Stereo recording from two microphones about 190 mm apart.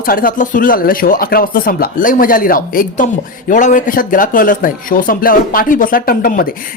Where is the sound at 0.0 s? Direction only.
50° left (ahead or behind).